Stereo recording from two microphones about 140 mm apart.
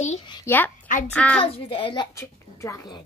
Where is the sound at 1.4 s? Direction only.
40° left (ahead or behind).